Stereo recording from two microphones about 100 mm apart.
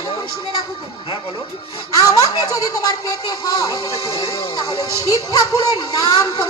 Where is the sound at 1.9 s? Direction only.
35° left (ahead or behind).